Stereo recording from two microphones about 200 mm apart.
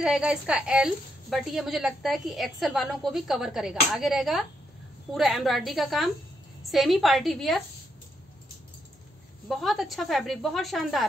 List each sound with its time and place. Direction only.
0.0 s a woman's voice: 5° right (ahead or behind)
9.5 s a woman's voice: centre (ahead or behind)